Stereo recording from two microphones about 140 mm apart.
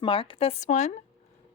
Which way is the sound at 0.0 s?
40° left (ahead or behind).